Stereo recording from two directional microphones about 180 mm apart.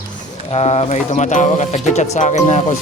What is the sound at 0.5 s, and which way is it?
Speech, 35° left (ahead or behind).